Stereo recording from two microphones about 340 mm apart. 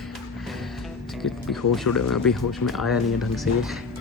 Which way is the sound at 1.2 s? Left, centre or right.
Centre.